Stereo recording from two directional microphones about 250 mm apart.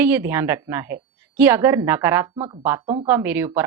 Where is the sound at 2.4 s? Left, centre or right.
Right.